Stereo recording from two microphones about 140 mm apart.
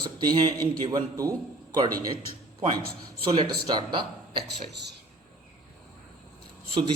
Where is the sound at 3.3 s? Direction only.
30° right (ahead or behind).